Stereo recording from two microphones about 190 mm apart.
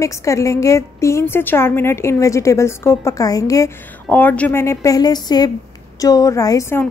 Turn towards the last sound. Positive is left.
turn(degrees=15)  # may be behind; listen again after turning